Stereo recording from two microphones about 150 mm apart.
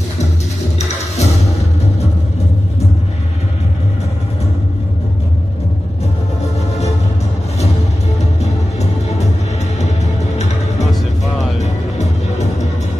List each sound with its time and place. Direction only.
0.7 s music: 45° left (ahead or behind)
10.3 s music: 50° left (ahead or behind)